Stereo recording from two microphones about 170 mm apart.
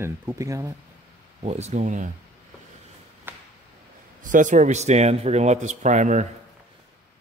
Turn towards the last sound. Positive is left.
turn(degrees=-45)  # may be behind; listen again after turning